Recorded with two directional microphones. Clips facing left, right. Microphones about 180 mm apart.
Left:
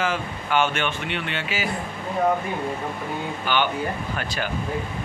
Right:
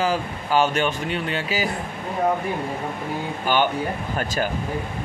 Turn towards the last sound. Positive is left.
turn(degrees=-40)  # may be behind; listen again after turning